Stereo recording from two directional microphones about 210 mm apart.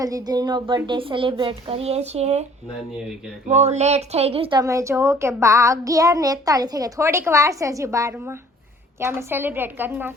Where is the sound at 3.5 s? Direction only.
35° right (ahead or behind).